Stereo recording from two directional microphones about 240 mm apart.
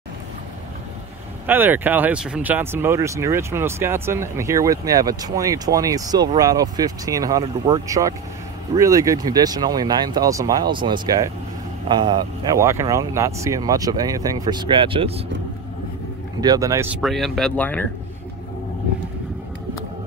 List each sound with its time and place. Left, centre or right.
1.4 s speech: centre; by 15.2 s right
16.3 s speech: centre